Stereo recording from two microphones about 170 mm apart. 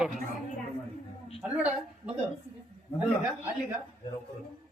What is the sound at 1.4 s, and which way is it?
Speech, 5° right (ahead or behind).